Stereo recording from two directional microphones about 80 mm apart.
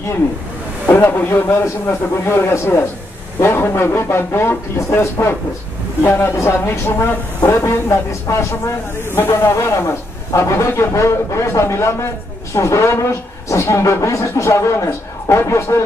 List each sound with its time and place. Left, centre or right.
0.9 s a man's voice: left